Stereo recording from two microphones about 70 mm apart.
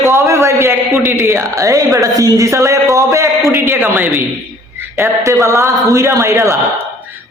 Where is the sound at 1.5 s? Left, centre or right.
Right.